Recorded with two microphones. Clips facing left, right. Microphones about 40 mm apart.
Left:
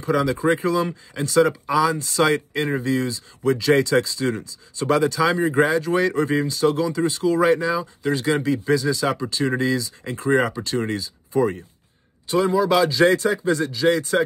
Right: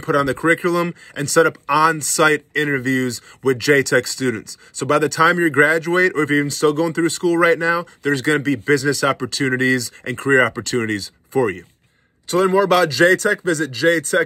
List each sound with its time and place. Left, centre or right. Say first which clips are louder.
0.0 s speech: right 3 dB; right